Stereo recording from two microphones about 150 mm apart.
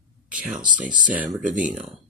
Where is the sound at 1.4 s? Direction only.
60° right (ahead or behind).